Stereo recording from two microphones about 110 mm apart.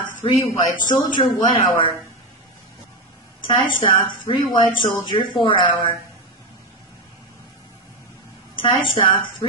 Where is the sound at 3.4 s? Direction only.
45° left (ahead or behind).